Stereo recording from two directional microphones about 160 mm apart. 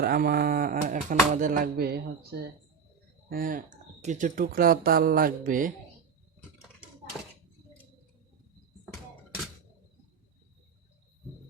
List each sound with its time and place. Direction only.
0.0 s speech: 70° right (ahead or behind); by 2.4 s 85° right
3.2 s speech: 65° right (ahead or behind)